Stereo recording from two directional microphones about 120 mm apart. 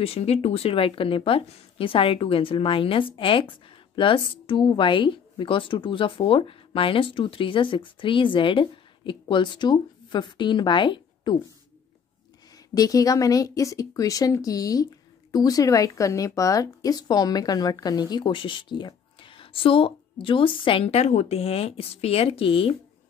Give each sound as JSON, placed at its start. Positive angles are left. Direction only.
{"t": 0.0, "sound": "speech", "side_deg": 55}
{"t": 12.7, "sound": "a woman's voice", "side_deg": 30}